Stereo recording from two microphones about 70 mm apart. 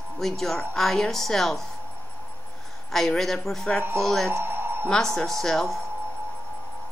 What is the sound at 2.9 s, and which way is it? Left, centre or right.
A woman's voice, centre.